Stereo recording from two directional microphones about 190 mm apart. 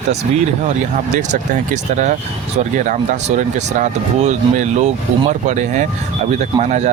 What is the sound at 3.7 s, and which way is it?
Speech, 40° right (ahead or behind).